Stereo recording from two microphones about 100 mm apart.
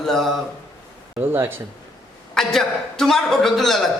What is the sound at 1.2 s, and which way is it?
Speech, 20° right (ahead or behind).